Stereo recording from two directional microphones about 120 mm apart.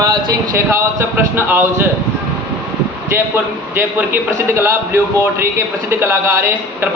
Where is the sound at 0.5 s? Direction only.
20° right (ahead or behind).